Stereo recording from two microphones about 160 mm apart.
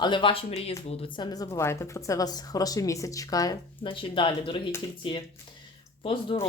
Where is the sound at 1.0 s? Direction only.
25° left (ahead or behind).